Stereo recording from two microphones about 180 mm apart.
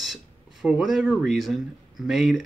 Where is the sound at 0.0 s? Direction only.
Centre (ahead or behind).